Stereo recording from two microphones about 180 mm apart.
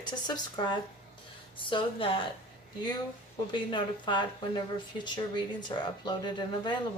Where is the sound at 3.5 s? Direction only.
25° left (ahead or behind).